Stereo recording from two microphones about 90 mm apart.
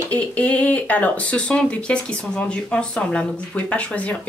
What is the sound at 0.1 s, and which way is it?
Speech, 15° left (ahead or behind).